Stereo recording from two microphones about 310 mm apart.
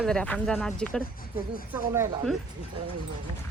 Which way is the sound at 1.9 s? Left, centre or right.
Centre.